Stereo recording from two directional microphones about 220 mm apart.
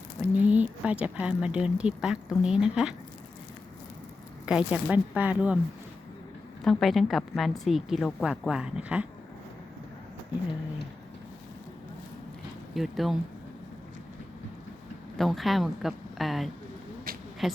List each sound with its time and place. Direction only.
0.3 s speech: 5° right (ahead or behind)
4.4 s speech: 5° right (ahead or behind)
6.7 s speech: centre (ahead or behind)
12.7 s speech: centre (ahead or behind)
15.2 s speech: centre (ahead or behind)
17.1 s a sound: 40° right (ahead or behind)
17.4 s speech: centre (ahead or behind)